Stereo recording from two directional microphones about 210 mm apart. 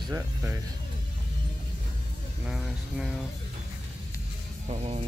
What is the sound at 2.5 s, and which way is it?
Speech, 5° right (ahead or behind).